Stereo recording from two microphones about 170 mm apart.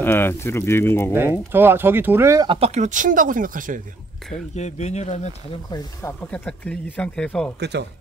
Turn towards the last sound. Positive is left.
turn(degrees=-80)